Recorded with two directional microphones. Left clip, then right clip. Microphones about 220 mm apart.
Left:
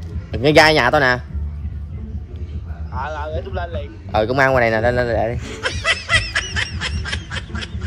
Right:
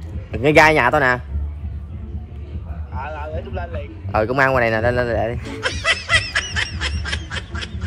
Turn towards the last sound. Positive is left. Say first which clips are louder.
# even
turn(degrees=0)  # may be behind; listen again after turning